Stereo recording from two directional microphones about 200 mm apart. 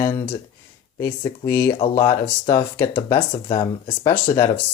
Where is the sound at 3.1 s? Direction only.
25° left (ahead or behind).